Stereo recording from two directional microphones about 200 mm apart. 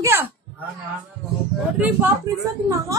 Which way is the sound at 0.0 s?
10° right (ahead or behind).